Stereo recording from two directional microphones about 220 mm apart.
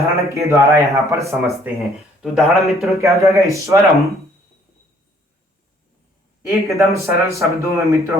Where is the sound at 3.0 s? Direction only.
15° right (ahead or behind).